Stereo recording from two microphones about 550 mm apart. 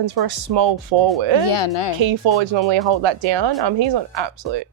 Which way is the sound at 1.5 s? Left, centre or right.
Left.